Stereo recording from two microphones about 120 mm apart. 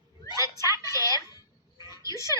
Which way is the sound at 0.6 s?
25° left (ahead or behind).